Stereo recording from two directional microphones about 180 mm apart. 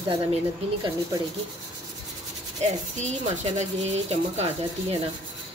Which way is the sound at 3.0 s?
40° right (ahead or behind).